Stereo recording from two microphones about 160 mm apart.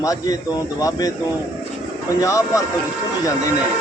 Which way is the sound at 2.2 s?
20° left (ahead or behind).